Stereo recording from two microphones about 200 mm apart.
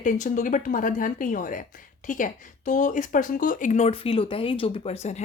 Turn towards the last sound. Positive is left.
turn(degrees=35)  # may be behind; listen again after turning